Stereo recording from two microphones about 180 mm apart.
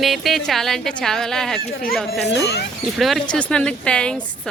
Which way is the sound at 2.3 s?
70° left (ahead or behind).